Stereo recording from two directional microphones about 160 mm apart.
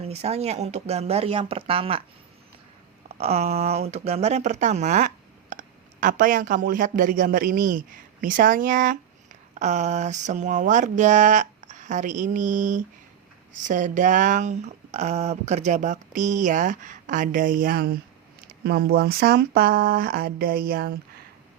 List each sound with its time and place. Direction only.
0.0 s speech: 40° right (ahead or behind)
3.2 s a man's voice: 40° right (ahead or behind); by 21.0 s 70° right (ahead or behind)